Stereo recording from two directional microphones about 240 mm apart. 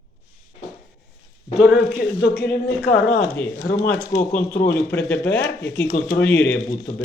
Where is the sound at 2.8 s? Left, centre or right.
Left.